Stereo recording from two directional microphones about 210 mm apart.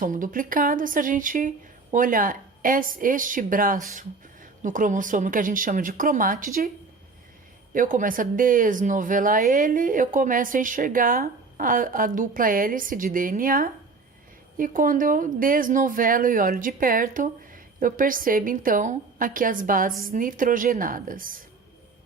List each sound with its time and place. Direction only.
0.0 s speech: 40° right (ahead or behind)
7.7 s speech: 40° right (ahead or behind)